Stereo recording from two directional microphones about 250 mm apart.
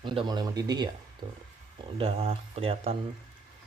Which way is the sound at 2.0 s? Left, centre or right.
Right.